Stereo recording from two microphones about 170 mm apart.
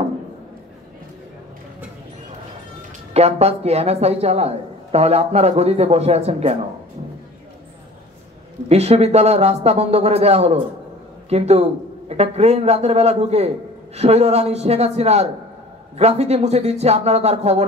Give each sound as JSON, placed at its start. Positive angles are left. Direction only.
{"t": 3.1, "sound": "a man's voice", "side_deg": -40}
{"t": 8.6, "sound": "a man's voice", "side_deg": -40}